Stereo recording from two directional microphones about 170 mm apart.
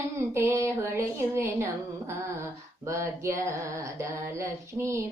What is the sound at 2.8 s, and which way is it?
Music, 15° right (ahead or behind).